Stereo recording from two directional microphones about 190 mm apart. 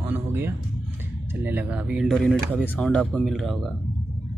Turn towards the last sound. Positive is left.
turn(degrees=0)  # may be behind; listen again after turning